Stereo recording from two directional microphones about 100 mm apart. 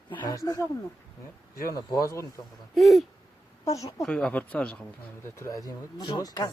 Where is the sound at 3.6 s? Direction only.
35° left (ahead or behind).